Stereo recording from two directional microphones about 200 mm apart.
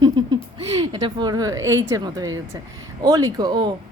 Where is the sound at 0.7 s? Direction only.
15° right (ahead or behind).